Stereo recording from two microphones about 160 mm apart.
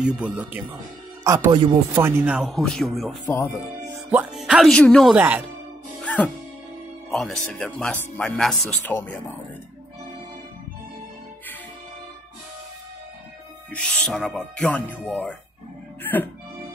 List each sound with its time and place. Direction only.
0.0 s speech: 5° right (ahead or behind)
1.2 s speech: 20° right (ahead or behind); by 5.2 s centre (ahead or behind)
6.0 s music: 10° left (ahead or behind)
7.1 s speech: centre (ahead or behind)
13.7 s speech: 5° left (ahead or behind)